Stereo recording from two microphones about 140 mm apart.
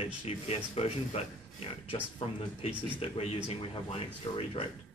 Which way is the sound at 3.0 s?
45° left (ahead or behind).